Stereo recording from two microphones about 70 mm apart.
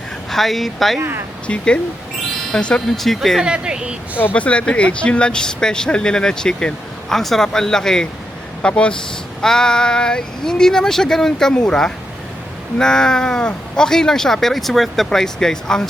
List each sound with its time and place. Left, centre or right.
0.3 s a woman's voice: centre
0.9 s speech: right
1.5 s a woman's voice: centre
4.2 s speech: left